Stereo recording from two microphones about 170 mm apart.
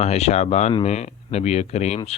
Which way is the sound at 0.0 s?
40° left (ahead or behind).